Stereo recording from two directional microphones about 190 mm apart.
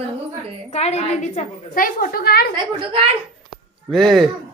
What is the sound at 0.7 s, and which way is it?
A woman's voice, 35° left (ahead or behind).